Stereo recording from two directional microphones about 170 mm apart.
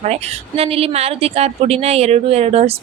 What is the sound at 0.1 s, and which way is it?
A woman's voice, 35° right (ahead or behind).